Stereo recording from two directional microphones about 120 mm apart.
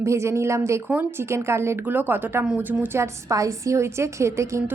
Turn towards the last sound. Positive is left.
turn(degrees=-25)  # may be behind; listen again after turning